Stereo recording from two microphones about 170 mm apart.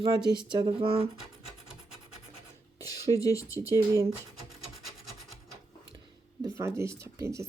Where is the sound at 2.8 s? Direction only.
20° left (ahead or behind).